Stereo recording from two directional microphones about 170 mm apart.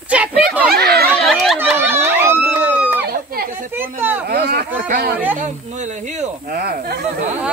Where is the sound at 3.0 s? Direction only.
65° right (ahead or behind).